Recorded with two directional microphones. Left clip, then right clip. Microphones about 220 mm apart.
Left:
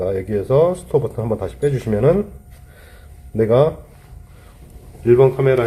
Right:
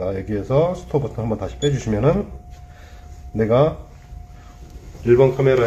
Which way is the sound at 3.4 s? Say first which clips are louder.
Left 2 dB; 30° left (ahead or behind).